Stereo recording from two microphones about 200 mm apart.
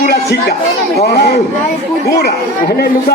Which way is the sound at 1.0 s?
55° left (ahead or behind).